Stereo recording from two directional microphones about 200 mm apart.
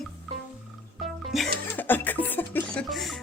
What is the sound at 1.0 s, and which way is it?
Music, centre (ahead or behind).